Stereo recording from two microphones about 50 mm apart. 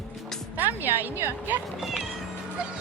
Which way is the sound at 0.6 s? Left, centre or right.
Right.